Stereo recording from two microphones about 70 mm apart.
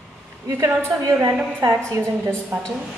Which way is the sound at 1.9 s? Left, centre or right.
Right.